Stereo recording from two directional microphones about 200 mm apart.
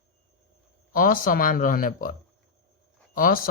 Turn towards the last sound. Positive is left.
turn(degrees=45)  # may be behind; listen again after turning